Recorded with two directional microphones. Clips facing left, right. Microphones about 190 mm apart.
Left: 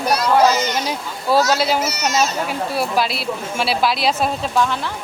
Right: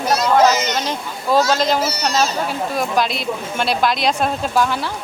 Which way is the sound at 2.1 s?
30° right (ahead or behind).